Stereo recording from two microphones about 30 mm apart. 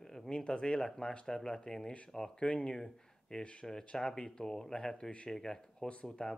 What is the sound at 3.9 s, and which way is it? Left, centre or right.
Speech, left.